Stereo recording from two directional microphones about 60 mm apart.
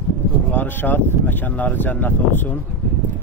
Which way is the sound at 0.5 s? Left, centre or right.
Left.